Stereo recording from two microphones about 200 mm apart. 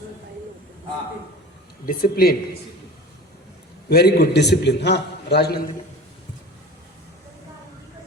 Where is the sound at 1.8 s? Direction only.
50° left (ahead or behind).